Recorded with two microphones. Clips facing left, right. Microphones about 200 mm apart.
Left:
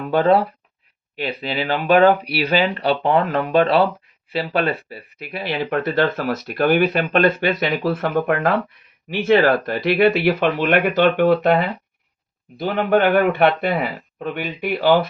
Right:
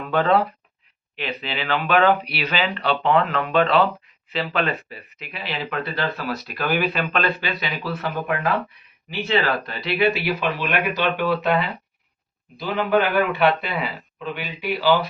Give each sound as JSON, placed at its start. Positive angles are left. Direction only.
{"t": 0.1, "sound": "a man's voice", "side_deg": 35}